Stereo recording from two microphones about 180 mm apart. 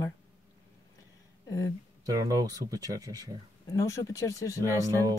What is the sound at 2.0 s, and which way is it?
Speech, 20° right (ahead or behind).